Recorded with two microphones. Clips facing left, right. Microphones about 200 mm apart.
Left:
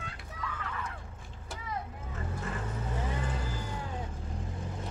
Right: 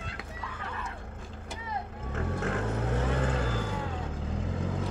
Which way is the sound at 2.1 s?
75° right (ahead or behind).